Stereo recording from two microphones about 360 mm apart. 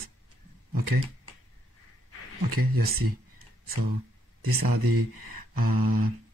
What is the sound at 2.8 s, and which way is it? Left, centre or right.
Speech, right.